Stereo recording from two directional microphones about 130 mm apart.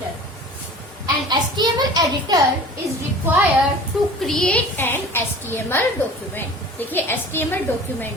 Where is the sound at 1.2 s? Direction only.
35° right (ahead or behind).